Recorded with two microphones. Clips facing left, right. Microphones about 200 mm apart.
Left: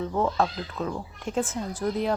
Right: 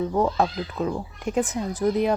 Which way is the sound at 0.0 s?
15° right (ahead or behind).